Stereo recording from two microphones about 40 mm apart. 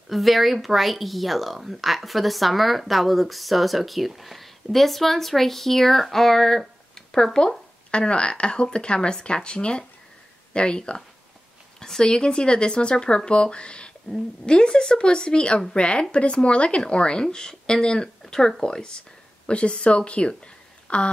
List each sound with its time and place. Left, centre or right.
0.1 s speech: centre
7.0 s a sound: centre
7.3 s speech: left
12.0 s speech: centre